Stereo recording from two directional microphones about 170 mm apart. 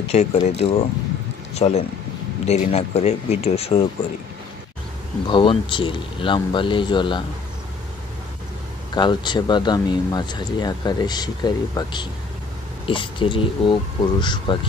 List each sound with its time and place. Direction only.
0.1 s speech: 40° left (ahead or behind)
5.2 s speech: 30° left (ahead or behind)
8.9 s speech: 25° left (ahead or behind)